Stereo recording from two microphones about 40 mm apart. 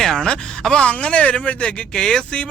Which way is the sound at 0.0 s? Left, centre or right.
Centre.